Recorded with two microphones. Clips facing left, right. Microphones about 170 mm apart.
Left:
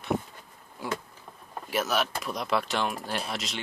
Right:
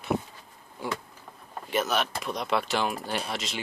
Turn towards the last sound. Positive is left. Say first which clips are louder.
# right 1 dB
turn(degrees=0)  # may be behind; listen again after turning